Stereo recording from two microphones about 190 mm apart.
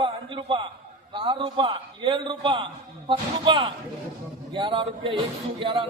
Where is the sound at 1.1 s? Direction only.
25° right (ahead or behind).